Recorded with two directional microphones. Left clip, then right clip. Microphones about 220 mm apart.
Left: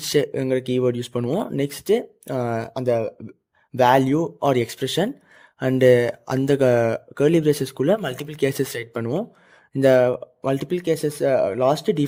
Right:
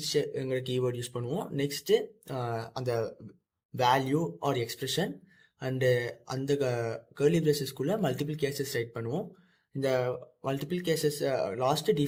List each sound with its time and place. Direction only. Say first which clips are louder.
0.0 s speech: left 9 dB; 45° left (ahead or behind)